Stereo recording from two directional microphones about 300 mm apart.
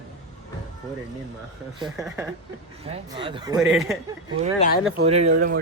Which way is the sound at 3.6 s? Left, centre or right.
Centre.